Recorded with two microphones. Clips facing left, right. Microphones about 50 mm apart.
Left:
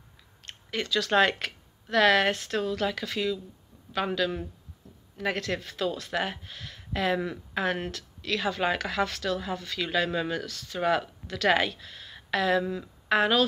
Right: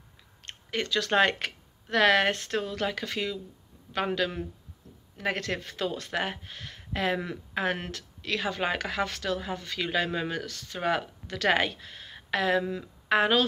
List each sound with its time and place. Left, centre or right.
0.5 s speech: right
10.4 s speech: right
10.8 s a woman's voice: right